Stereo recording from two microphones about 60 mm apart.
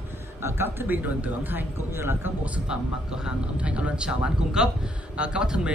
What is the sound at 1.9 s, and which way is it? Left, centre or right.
Speech, right.